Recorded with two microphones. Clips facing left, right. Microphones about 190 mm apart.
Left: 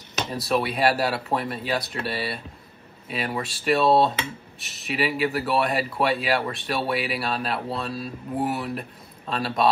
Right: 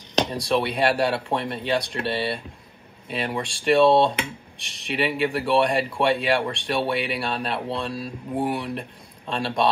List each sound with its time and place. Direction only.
0.3 s speech: 5° left (ahead or behind)
3.1 s speech: 5° left (ahead or behind)
7.5 s speech: 30° right (ahead or behind)
7.9 s speech: 5° left (ahead or behind)